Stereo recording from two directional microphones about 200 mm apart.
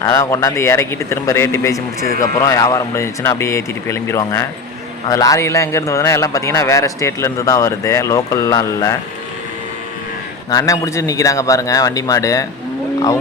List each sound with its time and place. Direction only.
0.0 s a man's voice: 15° left (ahead or behind)
10.5 s a man's voice: 15° left (ahead or behind)